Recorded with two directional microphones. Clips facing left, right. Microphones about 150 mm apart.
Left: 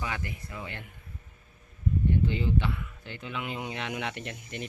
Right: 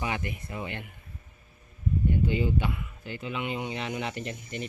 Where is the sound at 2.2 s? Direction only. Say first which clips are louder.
Right 1 dB; 10° right (ahead or behind).